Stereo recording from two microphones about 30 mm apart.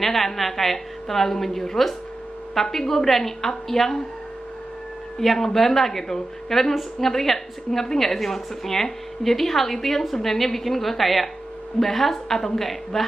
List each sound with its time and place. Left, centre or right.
0.0 s a woman's voice: centre
5.2 s a woman's voice: centre
12.4 s a woman's voice: centre